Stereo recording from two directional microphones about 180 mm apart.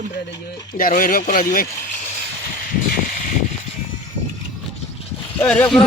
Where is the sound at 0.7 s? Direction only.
50° left (ahead or behind).